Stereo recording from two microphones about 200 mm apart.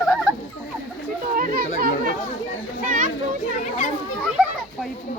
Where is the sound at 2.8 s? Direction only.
40° right (ahead or behind).